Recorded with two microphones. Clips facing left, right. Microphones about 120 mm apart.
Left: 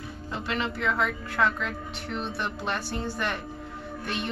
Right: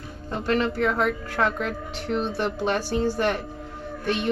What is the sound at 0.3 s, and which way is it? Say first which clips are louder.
A woman's voice: right 7 dB; 45° right (ahead or behind).